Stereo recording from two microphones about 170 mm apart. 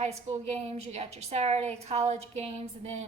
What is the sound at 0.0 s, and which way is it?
A woman's voice, 40° right (ahead or behind).